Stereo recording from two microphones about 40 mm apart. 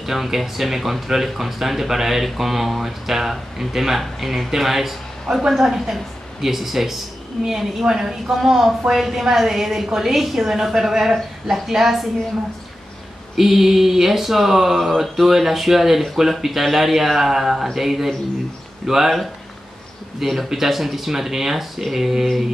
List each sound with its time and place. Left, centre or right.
0.0 s speech: centre
7.4 s speech: centre
7.9 s speech: centre
13.4 s speech: centre